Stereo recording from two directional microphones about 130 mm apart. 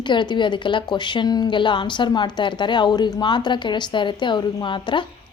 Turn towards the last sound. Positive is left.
turn(degrees=40)  # may be behind; listen again after turning